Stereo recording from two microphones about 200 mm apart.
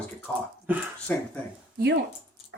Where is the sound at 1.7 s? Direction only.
55° right (ahead or behind).